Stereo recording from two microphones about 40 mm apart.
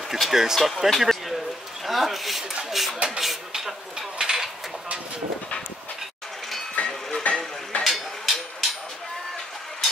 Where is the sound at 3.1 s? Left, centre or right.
Centre.